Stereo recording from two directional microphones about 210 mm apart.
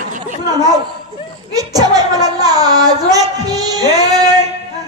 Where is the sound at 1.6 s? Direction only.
20° right (ahead or behind).